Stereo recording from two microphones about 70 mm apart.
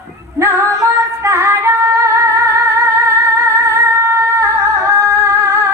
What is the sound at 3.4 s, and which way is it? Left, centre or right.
Singing, right.